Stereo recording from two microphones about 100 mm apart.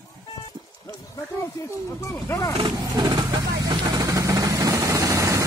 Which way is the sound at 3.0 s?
35° right (ahead or behind).